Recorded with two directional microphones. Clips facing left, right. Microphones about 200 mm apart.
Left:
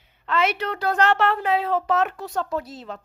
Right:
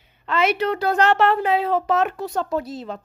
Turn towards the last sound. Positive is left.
turn(degrees=-20)  # may be behind; listen again after turning